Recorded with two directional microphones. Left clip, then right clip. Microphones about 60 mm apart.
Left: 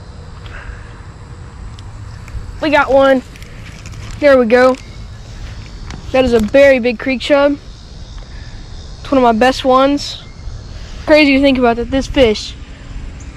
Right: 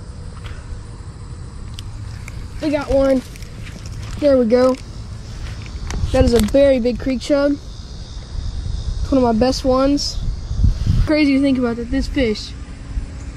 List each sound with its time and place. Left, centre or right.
2.6 s speech: centre
4.1 s speech: centre
5.9 s a sound: right
6.7 s speech: centre
9.0 s speech: centre
10.8 s a sound: centre
11.1 s a woman's voice: right
12.0 s speech: right